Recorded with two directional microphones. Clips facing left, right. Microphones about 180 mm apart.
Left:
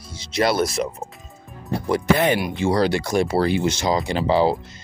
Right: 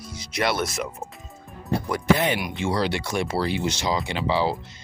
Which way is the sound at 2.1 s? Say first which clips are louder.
Left 5 dB; 50° left (ahead or behind).